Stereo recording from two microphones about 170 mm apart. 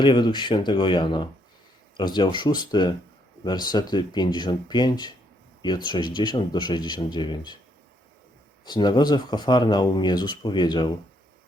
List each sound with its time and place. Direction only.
0.0 s speech: 25° left (ahead or behind)
8.6 s speech: 25° left (ahead or behind)